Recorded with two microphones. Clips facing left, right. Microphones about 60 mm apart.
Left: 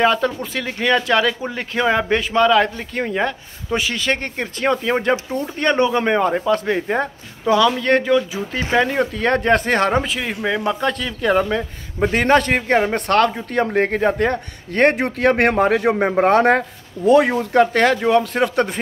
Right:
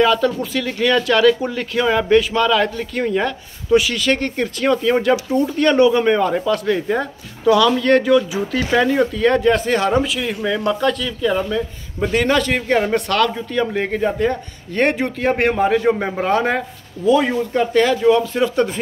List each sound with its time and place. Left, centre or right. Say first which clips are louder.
0.0 s a man's voice: right 2 dB; left
9.1 s speech: right 2 dB; left
11.2 s a man's voice: left 2 dB; left
15.5 s a man's voice: even; left